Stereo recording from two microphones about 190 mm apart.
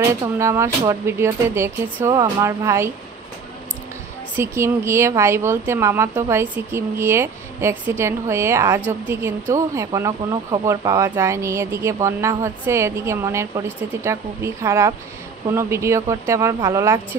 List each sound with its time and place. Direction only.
0.0 s a woman's voice: 15° right (ahead or behind)
4.4 s a woman's voice: 15° right (ahead or behind)